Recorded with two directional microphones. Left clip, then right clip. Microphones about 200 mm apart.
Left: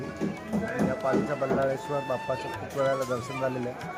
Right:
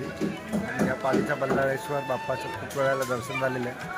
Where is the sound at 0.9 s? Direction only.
Centre (ahead or behind).